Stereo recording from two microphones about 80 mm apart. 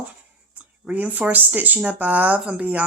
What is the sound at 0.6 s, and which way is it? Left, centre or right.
A woman's voice, centre.